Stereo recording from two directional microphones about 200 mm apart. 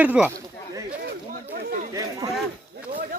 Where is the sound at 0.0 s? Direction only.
10° right (ahead or behind).